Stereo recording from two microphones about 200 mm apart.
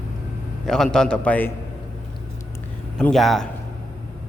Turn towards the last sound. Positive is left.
turn(degrees=0)  # may be behind; listen again after turning